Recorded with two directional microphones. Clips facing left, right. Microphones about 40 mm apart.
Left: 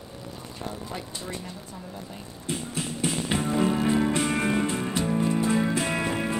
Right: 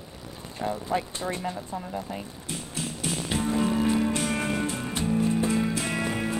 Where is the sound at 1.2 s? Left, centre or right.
Right.